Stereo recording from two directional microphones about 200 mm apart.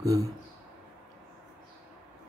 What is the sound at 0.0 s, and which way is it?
Speech, 15° right (ahead or behind).